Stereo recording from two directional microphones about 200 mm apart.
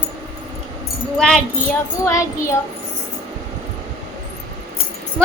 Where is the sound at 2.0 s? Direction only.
15° left (ahead or behind).